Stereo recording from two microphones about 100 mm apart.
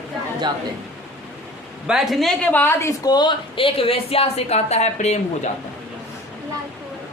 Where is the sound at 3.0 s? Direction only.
45° left (ahead or behind).